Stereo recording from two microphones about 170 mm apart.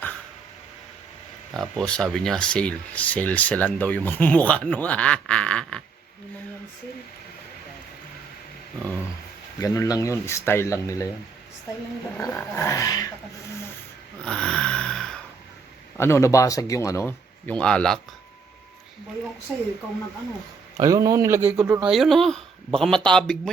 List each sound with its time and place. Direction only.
1.5 s speech: centre (ahead or behind)
9.6 s speech: 20° left (ahead or behind)
12.1 s speech: 10° left (ahead or behind)
14.3 s a sound: 5° left (ahead or behind)
16.0 s speech: 15° left (ahead or behind)
20.7 s speech: 20° right (ahead or behind)
21.8 s speech: centre (ahead or behind)